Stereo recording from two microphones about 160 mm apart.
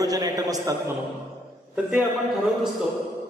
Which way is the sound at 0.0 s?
25° right (ahead or behind).